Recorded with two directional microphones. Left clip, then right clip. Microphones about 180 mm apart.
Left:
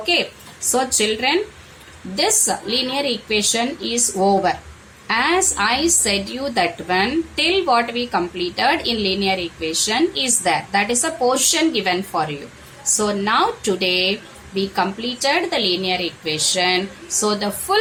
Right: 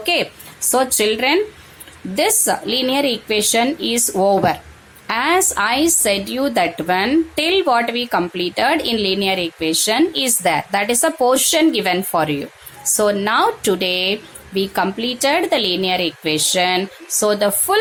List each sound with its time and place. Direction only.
0.0 s a woman's voice: 45° right (ahead or behind)